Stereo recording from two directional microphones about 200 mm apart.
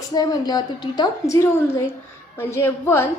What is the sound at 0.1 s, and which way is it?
A woman's voice, 20° left (ahead or behind).